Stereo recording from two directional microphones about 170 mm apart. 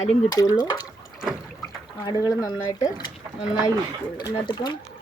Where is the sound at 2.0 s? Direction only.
20° left (ahead or behind).